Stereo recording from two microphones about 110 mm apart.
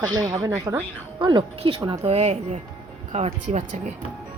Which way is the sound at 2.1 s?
85° right.